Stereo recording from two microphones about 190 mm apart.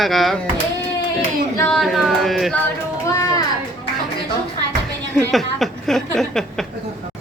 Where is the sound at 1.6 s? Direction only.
Centre (ahead or behind).